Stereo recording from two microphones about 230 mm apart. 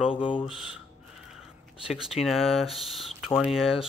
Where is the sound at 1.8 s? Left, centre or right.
Centre.